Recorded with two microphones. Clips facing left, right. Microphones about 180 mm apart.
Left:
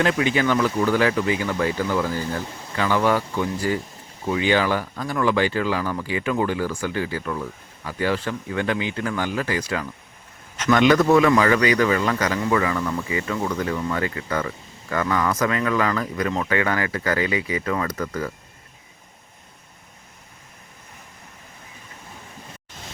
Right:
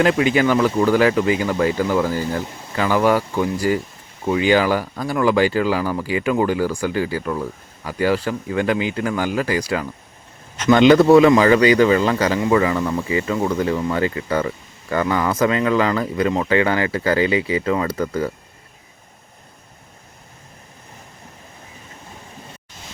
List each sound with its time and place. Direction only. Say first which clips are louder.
0.0 s speech: right 4 dB; 30° right (ahead or behind)